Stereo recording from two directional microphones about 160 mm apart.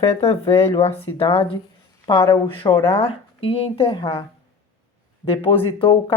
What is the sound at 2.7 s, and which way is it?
Speech, 15° left (ahead or behind).